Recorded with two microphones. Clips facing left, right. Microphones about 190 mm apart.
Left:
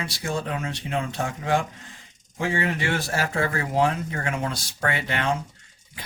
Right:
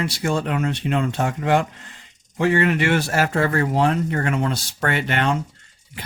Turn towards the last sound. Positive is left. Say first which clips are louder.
# right 4 dB
turn(degrees=-65)  # may be behind; listen again after turning